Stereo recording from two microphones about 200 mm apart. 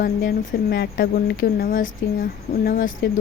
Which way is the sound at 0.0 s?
45° left (ahead or behind).